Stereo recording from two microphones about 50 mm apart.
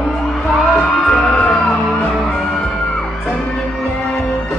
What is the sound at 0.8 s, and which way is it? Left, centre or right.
Music, centre.